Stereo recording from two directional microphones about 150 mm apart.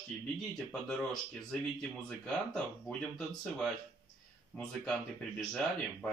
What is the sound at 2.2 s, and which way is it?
Speech, 5° left (ahead or behind).